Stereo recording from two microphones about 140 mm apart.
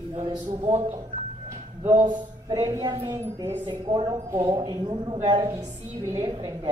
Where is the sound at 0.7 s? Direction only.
20° right (ahead or behind).